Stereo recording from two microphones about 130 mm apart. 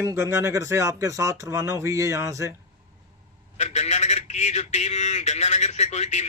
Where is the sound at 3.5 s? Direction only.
60° left (ahead or behind).